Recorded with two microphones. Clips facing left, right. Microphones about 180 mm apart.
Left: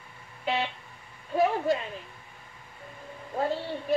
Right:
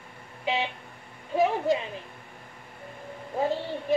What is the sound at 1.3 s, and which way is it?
Speech, 15° right (ahead or behind).